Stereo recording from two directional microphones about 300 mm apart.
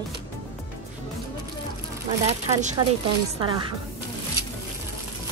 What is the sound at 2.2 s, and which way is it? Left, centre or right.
Speech, right.